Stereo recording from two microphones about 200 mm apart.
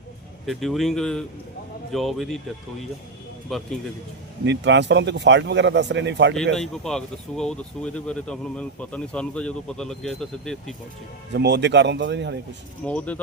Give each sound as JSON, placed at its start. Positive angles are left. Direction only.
{"t": 0.4, "sound": "speech", "side_deg": 0}
{"t": 3.5, "sound": "speech", "side_deg": 0}
{"t": 4.4, "sound": "speech", "side_deg": -65}
{"t": 6.3, "sound": "speech", "side_deg": 0}
{"t": 11.3, "sound": "speech", "side_deg": -60}
{"t": 12.8, "sound": "speech", "side_deg": 5}